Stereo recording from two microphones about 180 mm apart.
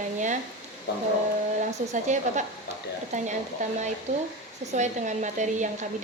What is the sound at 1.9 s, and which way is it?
A woman's voice, 40° right (ahead or behind).